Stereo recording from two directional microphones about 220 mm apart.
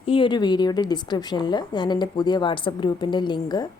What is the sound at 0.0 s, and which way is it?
A woman's voice, 25° left (ahead or behind).